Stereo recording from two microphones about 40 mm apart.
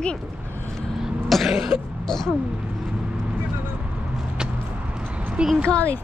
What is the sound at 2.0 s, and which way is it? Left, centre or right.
Speech, centre.